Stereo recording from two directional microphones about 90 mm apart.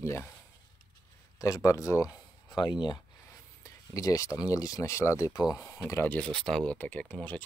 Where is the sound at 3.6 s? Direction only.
40° left (ahead or behind).